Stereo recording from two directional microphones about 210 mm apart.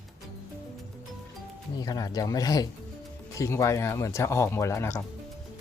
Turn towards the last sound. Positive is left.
turn(degrees=15)  # may be behind; listen again after turning